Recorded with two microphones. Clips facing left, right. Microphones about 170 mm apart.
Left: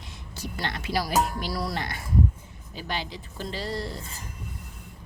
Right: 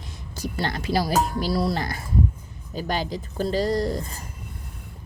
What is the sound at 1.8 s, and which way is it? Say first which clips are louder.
Speech: right 1 dB; 35° right (ahead or behind).